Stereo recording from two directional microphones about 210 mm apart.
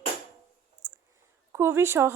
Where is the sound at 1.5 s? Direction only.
10° right (ahead or behind).